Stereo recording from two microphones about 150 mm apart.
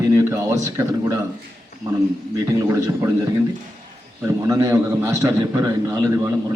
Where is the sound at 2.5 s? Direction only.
20° right (ahead or behind).